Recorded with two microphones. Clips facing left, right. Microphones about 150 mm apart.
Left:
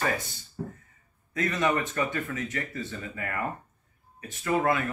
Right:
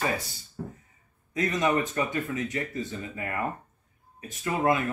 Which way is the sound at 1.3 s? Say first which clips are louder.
Right 1 dB; 15° right (ahead or behind).